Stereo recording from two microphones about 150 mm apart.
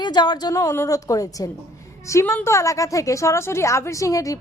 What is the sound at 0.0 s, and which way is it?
A woman's voice, 30° left (ahead or behind).